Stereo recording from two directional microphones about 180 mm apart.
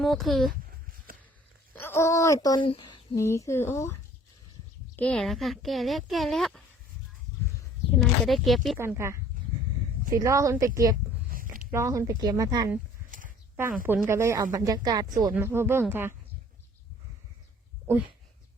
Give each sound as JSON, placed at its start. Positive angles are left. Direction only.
{"t": 0.0, "sound": "speech", "side_deg": 0}
{"t": 1.7, "sound": "speech", "side_deg": 15}
{"t": 4.9, "sound": "speech", "side_deg": 5}
{"t": 7.9, "sound": "speech", "side_deg": 0}
{"t": 8.8, "sound": "speech", "side_deg": -15}
{"t": 13.1, "sound": "a sound", "side_deg": -50}
{"t": 13.8, "sound": "speech", "side_deg": -15}